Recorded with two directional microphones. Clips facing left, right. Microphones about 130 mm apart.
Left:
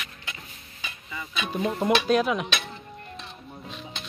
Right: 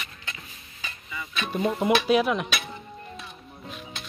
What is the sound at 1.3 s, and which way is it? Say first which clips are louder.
Speech: right 1 dB; centre (ahead or behind).